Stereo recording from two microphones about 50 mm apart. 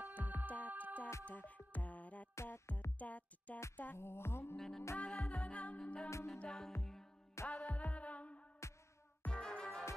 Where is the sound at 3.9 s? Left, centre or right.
Left.